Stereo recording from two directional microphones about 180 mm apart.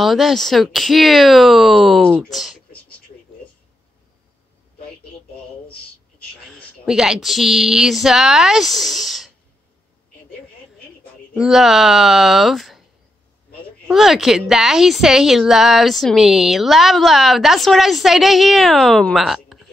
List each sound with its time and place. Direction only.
0.0 s a woman's voice: centre (ahead or behind)
6.5 s a woman's voice: 5° right (ahead or behind)
11.3 s a woman's voice: centre (ahead or behind)
13.8 s a woman's voice: centre (ahead or behind)